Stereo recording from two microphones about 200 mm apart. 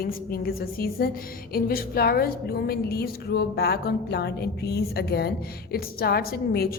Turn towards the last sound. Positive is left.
turn(degrees=50)  # may be behind; listen again after turning